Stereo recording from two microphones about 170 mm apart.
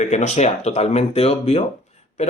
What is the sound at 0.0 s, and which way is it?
Speech, 45° left (ahead or behind).